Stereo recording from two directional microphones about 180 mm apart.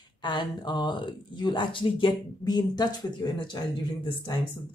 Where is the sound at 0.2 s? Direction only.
25° left (ahead or behind).